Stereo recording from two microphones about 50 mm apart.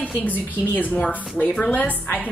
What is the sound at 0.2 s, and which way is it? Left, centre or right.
A woman's voice, left.